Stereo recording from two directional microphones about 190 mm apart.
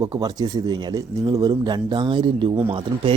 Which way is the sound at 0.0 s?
20° right (ahead or behind).